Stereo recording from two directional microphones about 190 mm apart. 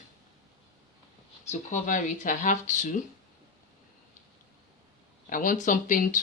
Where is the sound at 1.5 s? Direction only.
40° left (ahead or behind).